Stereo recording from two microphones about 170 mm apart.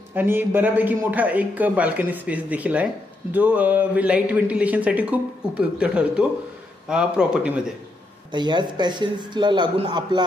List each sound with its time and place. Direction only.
0.1 s a man's voice: 10° right (ahead or behind)
8.3 s a man's voice: 25° right (ahead or behind)